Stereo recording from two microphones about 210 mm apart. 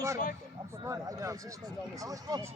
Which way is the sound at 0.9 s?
15° right (ahead or behind).